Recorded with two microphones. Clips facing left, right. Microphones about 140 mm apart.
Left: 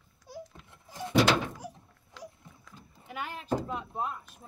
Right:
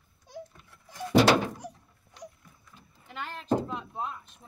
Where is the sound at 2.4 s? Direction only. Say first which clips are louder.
Left 3 dB; 25° left (ahead or behind).